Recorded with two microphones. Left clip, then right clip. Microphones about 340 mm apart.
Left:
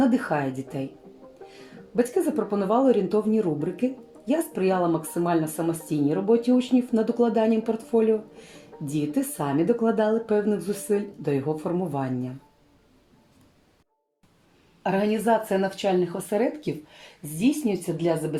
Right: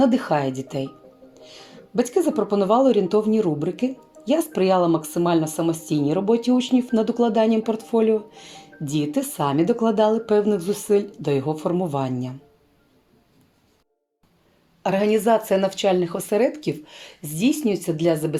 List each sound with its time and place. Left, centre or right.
0.0 s speech: right
2.0 s speech: right
14.8 s speech: right